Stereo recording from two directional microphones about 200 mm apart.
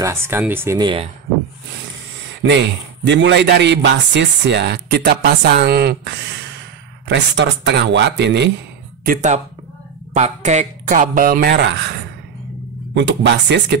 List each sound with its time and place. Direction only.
0.0 s speech: 15° right (ahead or behind)
2.4 s speech: 70° right (ahead or behind)
9.0 s speech: 40° right (ahead or behind); by 13.7 s 60° right (ahead or behind)